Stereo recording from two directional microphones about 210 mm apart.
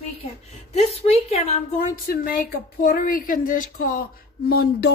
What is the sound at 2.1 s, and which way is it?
A woman's voice, 45° left (ahead or behind).